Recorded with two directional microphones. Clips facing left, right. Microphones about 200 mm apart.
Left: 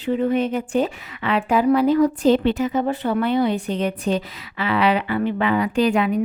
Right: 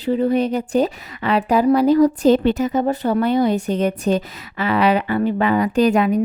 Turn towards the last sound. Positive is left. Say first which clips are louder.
# right 3 dB
turn(degrees=-40)  # may be behind; listen again after turning